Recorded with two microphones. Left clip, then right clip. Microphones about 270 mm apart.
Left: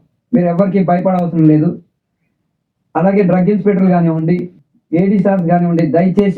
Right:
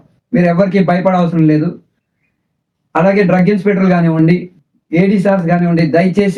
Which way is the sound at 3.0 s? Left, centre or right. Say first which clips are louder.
Right 2 dB; right.